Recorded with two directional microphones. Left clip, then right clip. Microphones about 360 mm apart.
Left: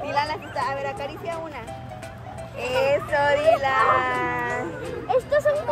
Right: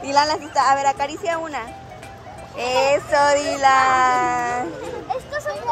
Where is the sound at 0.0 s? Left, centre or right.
Centre.